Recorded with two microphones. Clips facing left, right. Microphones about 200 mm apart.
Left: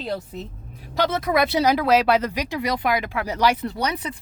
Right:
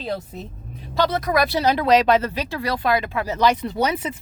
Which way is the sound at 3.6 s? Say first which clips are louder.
Right 3 dB; 25° right (ahead or behind).